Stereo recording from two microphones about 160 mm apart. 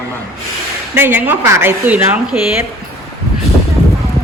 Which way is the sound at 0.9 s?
15° right (ahead or behind).